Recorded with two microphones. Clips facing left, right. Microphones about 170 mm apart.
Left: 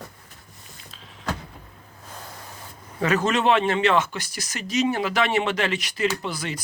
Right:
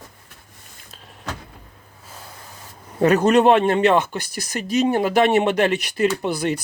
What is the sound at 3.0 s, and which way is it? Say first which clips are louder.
Speech: right 7 dB; 55° right (ahead or behind).